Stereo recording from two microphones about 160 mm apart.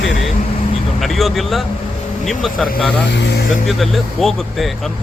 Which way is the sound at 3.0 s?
90° left.